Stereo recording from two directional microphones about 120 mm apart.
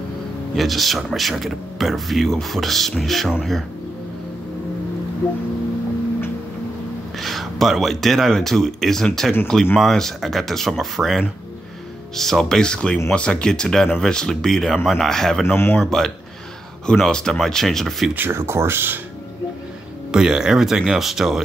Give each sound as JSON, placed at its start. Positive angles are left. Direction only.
{"t": 0.6, "sound": "speech", "side_deg": 0}
{"t": 7.2, "sound": "speech", "side_deg": 0}
{"t": 15.4, "sound": "speech", "side_deg": 20}
{"t": 15.8, "sound": "speech", "side_deg": 5}
{"t": 18.1, "sound": "speech", "side_deg": -20}
{"t": 20.1, "sound": "speech", "side_deg": -5}